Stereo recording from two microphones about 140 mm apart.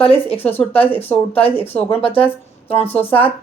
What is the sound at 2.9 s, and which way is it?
Speech, 15° left (ahead or behind).